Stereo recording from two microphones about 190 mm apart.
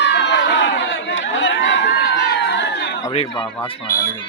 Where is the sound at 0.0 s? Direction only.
65° left (ahead or behind).